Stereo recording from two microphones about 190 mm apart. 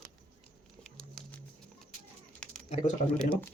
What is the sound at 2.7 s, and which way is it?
Speech, 35° left (ahead or behind).